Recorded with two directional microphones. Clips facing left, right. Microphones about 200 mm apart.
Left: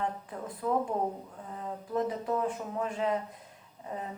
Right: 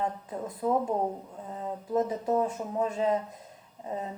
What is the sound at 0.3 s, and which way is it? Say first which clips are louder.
Speech: right 4 dB; 25° right (ahead or behind).